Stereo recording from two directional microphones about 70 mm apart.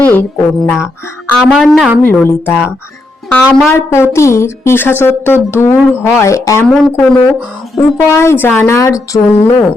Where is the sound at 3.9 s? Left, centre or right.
Left.